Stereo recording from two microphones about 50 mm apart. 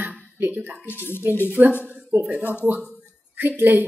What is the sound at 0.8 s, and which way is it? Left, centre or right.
Speech, left.